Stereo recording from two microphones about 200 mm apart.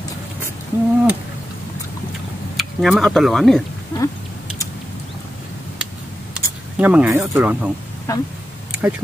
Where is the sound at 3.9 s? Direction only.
15° left (ahead or behind).